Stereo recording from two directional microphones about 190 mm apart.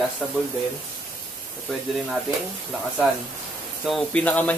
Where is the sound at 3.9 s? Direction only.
5° left (ahead or behind).